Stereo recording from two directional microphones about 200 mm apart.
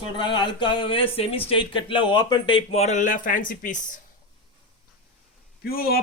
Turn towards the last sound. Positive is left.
turn(degrees=50)  # may be behind; listen again after turning